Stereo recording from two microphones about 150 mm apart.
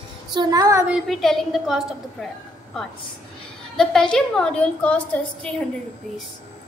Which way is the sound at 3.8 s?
5° left (ahead or behind).